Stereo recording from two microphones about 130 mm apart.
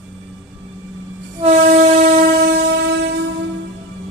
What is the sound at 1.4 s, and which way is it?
Train, 65° right (ahead or behind).